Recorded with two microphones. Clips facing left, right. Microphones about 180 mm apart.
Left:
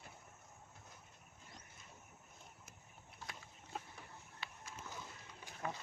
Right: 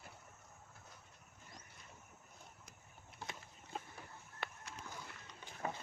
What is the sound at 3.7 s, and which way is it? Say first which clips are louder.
Chicken: right 1 dB; 5° left (ahead or behind).